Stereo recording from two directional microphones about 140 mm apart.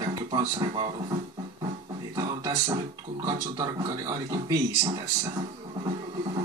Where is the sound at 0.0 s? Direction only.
30° right (ahead or behind).